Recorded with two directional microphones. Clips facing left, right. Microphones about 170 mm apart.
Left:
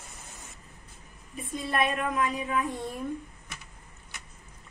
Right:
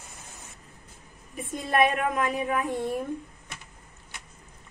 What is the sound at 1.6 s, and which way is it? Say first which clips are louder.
Speech: right 5 dB; 55° right (ahead or behind).